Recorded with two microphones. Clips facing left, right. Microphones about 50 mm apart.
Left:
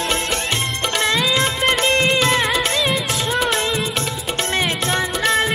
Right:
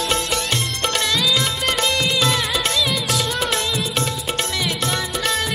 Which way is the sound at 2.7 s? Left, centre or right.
Left.